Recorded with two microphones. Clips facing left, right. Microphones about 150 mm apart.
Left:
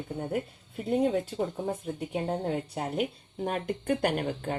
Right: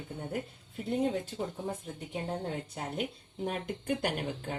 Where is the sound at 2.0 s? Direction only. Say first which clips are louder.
Left 5 dB; 60° left (ahead or behind).